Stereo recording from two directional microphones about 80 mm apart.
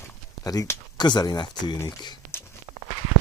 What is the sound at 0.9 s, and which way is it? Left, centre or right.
Speech, left.